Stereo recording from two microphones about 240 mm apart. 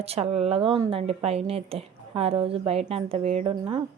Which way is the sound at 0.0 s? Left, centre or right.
Right.